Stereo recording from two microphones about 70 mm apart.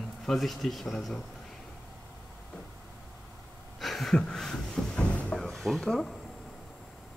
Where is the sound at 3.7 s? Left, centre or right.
Centre.